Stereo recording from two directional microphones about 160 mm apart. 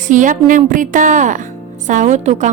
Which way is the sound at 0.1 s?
55° right (ahead or behind).